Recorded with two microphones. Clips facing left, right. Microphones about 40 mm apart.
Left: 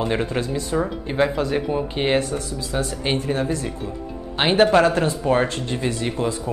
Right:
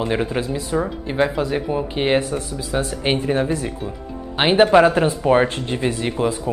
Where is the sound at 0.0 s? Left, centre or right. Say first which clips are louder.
Right 1 dB; centre.